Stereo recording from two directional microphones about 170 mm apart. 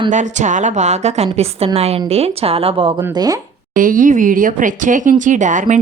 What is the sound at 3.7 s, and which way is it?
A woman's voice, 55° right (ahead or behind).